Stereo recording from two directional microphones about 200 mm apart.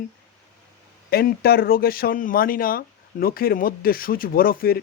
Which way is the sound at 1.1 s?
50° left (ahead or behind).